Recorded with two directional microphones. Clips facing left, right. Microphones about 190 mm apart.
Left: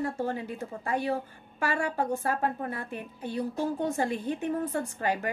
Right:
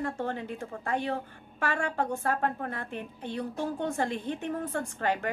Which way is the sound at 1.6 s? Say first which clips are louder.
Left 1 dB; 10° left (ahead or behind).